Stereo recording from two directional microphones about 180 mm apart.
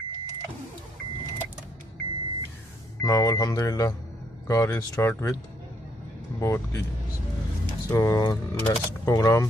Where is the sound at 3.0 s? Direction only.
20° left (ahead or behind).